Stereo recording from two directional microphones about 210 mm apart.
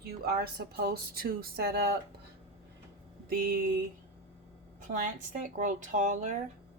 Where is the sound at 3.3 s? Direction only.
45° right (ahead or behind).